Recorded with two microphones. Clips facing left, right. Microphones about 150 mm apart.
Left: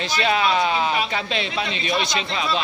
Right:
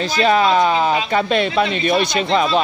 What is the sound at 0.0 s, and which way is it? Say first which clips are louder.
Speech: right 6 dB; 45° right (ahead or behind).